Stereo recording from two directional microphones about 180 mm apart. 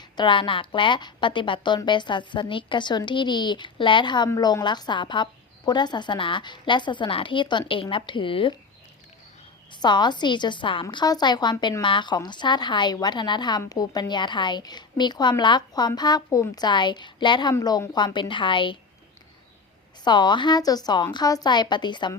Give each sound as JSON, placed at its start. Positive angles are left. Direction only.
{"t": 0.0, "sound": "speech", "side_deg": 25}
{"t": 9.7, "sound": "speech", "side_deg": 25}
{"t": 20.1, "sound": "speech", "side_deg": 25}